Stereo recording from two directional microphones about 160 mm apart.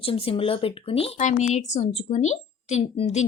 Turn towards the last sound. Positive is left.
turn(degrees=45)  # may be behind; listen again after turning